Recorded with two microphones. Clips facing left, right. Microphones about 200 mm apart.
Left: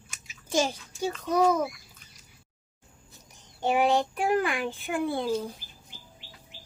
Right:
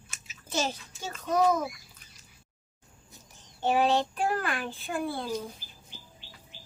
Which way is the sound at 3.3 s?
15° left (ahead or behind).